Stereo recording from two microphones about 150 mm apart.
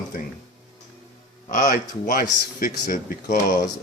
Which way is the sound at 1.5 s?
60° left (ahead or behind).